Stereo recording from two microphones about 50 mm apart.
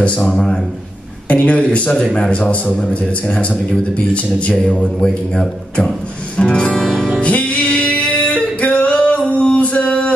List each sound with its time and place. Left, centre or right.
0.0 s speech: centre
1.3 s a man's voice: left
5.0 s speech: centre
7.2 s music: left
7.6 s singing: left